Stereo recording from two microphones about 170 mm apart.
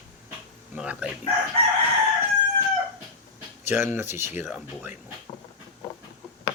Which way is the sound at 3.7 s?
15° right (ahead or behind).